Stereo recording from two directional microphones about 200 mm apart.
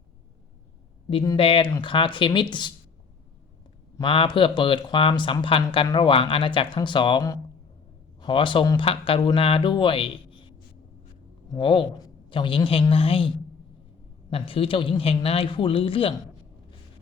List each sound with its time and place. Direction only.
1.1 s speech: 20° left (ahead or behind)
3.9 s speech: 25° left (ahead or behind)
11.5 s speech: 25° left (ahead or behind)